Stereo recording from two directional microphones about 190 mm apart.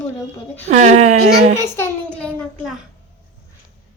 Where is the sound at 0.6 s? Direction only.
40° right (ahead or behind).